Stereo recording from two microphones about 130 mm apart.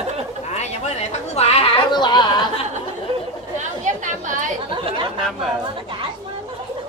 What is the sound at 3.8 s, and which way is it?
Chatter, 80° right.